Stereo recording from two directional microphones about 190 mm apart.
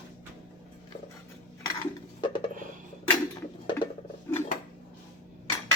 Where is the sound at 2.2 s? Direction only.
25° left (ahead or behind).